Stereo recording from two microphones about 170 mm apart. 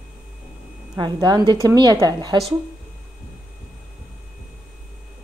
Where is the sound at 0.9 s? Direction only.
25° right (ahead or behind).